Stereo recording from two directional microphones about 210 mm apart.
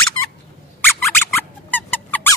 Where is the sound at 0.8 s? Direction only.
10° left (ahead or behind).